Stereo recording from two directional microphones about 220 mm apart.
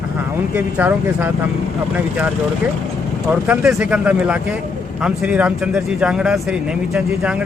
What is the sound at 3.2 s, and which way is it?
Speech, 5° right (ahead or behind).